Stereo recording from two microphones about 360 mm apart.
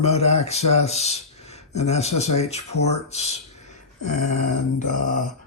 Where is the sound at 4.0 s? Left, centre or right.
Left.